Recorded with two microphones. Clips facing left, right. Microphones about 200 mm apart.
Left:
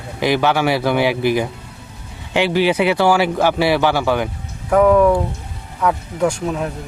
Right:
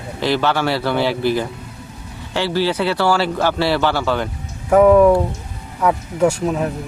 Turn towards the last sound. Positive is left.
turn(degrees=-5)  # may be behind; listen again after turning